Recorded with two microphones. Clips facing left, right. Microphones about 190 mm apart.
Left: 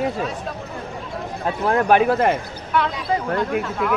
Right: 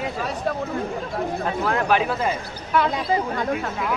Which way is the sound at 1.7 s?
50° left (ahead or behind).